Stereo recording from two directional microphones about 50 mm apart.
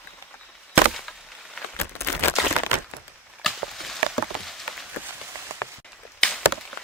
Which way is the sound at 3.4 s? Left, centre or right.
Centre.